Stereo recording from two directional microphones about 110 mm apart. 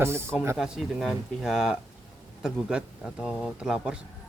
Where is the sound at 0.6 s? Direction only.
5° right (ahead or behind).